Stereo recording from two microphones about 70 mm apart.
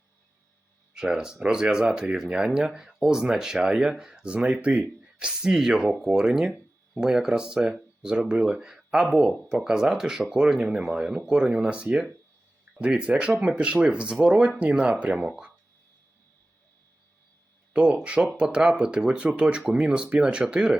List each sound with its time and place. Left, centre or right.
0.9 s speech: centre
17.7 s speech: centre